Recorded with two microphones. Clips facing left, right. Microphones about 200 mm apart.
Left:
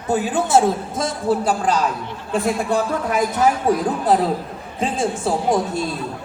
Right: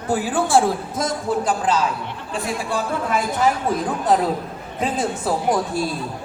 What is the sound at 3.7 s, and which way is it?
A woman's voice, 35° left (ahead or behind).